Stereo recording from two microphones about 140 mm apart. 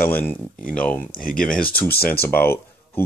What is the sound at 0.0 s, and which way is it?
Speech, 15° left (ahead or behind).